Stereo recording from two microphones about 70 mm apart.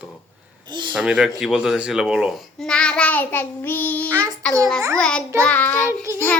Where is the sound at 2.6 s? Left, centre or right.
Centre.